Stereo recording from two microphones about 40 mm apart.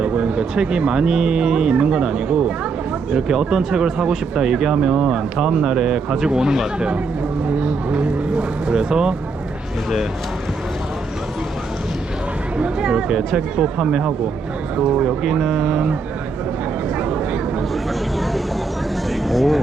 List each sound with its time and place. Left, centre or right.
0.0 s speech: right
8.6 s speech: right
12.8 s speech: centre
17.0 s a sound: right
19.3 s speech: centre